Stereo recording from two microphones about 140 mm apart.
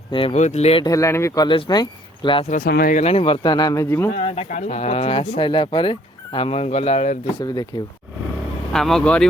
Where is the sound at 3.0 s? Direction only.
45° left (ahead or behind); by 4.1 s 20° left (ahead or behind).